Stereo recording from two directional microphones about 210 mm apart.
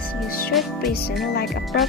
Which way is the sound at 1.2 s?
50° left (ahead or behind).